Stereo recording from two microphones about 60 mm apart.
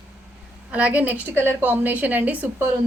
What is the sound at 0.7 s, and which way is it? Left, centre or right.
Speech, right.